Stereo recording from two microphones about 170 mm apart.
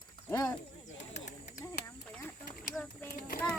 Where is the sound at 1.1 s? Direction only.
45° left (ahead or behind).